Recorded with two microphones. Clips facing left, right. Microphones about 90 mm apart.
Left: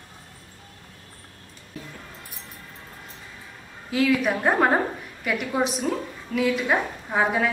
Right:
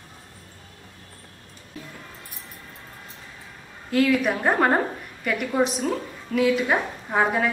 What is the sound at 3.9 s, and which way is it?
A woman's voice, centre (ahead or behind).